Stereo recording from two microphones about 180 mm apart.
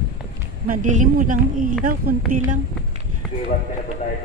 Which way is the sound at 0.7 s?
45° right (ahead or behind).